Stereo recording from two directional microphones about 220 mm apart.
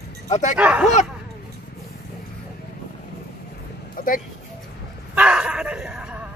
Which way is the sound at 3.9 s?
40° left (ahead or behind).